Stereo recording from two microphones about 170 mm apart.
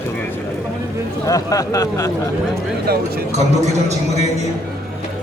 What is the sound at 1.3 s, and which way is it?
Speech, 20° left (ahead or behind).